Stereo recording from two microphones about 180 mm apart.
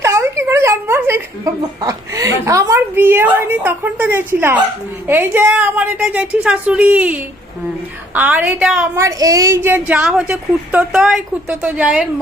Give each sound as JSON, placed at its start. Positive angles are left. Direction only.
{"t": 0.0, "sound": "a sound", "side_deg": -15}
{"t": 1.8, "sound": "a woman's voice", "side_deg": -20}
{"t": 9.0, "sound": "a woman's voice", "side_deg": -20}